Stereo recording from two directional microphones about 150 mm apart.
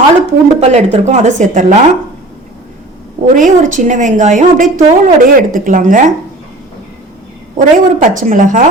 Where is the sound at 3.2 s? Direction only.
60° right (ahead or behind).